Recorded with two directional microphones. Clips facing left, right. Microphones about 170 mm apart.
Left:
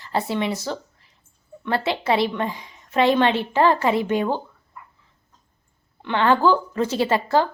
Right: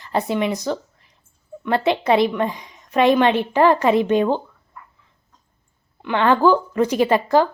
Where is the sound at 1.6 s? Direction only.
20° right (ahead or behind).